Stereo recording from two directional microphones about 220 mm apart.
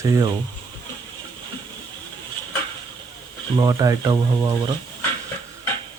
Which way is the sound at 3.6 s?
15° right (ahead or behind).